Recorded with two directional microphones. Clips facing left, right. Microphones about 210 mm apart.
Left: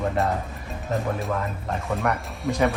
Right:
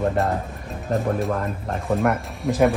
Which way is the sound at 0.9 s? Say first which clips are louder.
Right 4 dB; centre (ahead or behind).